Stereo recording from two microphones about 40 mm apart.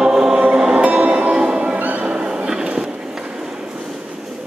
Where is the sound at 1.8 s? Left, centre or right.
Right.